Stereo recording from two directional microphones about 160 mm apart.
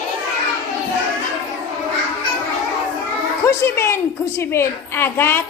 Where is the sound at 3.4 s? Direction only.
15° left (ahead or behind).